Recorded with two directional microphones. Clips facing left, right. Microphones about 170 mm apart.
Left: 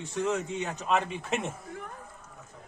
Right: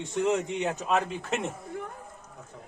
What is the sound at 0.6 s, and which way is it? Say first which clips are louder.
Speech: right 2 dB; 5° right (ahead or behind).